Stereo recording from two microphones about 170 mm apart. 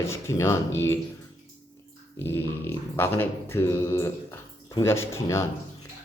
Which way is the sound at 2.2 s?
15° left (ahead or behind).